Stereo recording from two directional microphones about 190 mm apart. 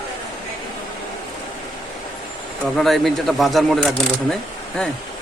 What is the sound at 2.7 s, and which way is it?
A man's voice, centre (ahead or behind).